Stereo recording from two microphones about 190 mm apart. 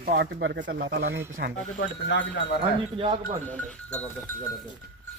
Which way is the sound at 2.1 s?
65° left (ahead or behind).